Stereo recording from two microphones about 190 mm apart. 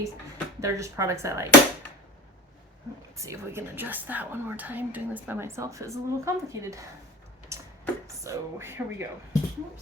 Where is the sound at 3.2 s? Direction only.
15° right (ahead or behind).